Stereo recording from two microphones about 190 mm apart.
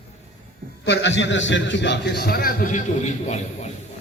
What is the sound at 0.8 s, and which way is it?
A man's voice, 65° left (ahead or behind).